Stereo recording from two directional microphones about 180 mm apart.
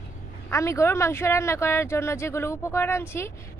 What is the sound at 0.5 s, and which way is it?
Speech, 15° left (ahead or behind).